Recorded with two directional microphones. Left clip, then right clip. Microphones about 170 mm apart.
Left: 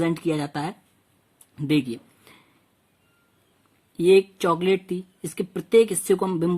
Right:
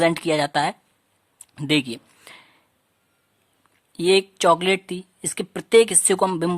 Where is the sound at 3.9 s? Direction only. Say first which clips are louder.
Left 1 dB; 30° right (ahead or behind).